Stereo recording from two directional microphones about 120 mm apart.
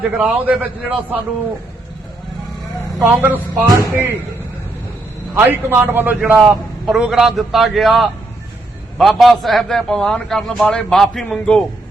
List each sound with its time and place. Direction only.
0.2 s a man's voice: 10° right (ahead or behind)
3.0 s a man's voice: 15° right (ahead or behind)
5.3 s a man's voice: 20° right (ahead or behind)
6.4 s a man's voice: centre (ahead or behind)